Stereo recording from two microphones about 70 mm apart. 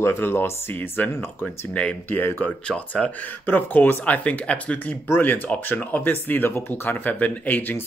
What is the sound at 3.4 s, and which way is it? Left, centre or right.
Speech, left.